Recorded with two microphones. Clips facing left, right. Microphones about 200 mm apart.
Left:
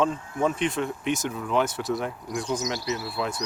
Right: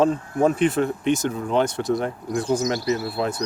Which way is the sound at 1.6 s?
5° left (ahead or behind).